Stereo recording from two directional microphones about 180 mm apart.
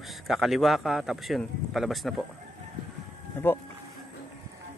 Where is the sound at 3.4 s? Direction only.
10° left (ahead or behind).